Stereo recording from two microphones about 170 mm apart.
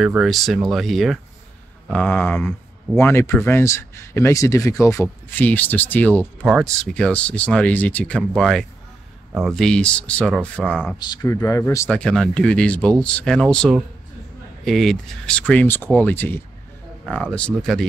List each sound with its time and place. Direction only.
0.0 s speech: 5° right (ahead or behind)
1.9 s speech: 10° left (ahead or behind)
11.0 s speech: 20° left (ahead or behind); by 17.8 s 5° left (ahead or behind)